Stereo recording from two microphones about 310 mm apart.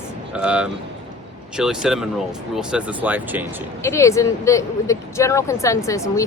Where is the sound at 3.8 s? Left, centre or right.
Centre.